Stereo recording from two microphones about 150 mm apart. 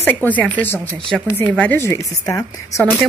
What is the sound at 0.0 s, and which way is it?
A woman's voice, 10° left (ahead or behind).